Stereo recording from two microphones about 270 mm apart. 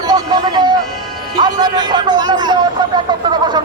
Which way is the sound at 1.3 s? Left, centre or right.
Centre.